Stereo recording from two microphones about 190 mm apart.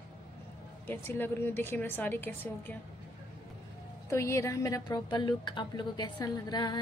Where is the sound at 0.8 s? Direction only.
10° left (ahead or behind).